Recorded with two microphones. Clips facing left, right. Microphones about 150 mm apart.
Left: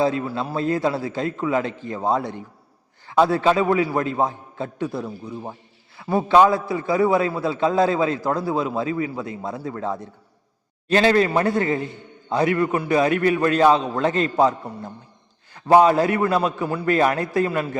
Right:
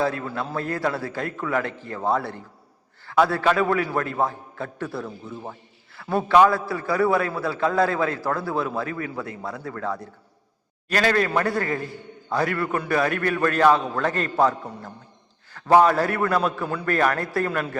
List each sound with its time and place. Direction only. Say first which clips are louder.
0.0 s a man's voice: left 4 dB; 20° left (ahead or behind)